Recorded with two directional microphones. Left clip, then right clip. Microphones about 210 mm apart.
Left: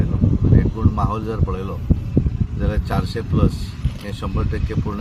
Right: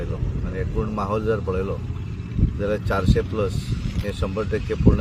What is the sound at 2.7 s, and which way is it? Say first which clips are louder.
Speech: right 3 dB; 5° right (ahead or behind).